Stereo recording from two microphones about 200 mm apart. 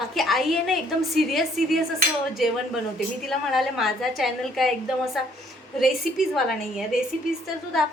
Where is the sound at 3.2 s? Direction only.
Centre (ahead or behind).